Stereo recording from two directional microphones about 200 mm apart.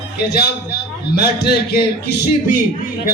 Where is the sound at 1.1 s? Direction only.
50° left (ahead or behind).